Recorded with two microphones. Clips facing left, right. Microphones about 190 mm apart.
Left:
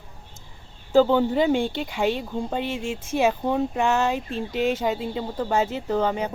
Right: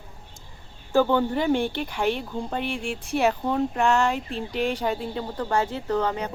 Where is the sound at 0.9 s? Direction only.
15° left (ahead or behind).